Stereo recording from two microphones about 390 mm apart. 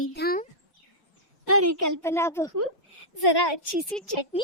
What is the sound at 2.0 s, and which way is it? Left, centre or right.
Speech, centre.